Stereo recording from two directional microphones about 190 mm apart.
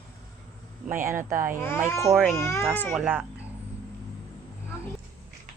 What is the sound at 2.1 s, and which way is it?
Speech, centre (ahead or behind).